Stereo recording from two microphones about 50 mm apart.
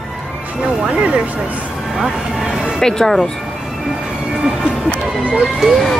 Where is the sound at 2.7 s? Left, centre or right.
Centre.